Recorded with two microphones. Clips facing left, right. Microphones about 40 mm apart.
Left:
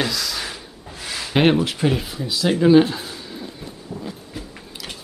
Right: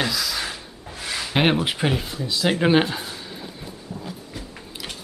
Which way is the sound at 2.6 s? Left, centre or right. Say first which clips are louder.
Left 6 dB; right.